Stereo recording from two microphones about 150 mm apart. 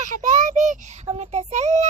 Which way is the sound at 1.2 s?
45° right (ahead or behind).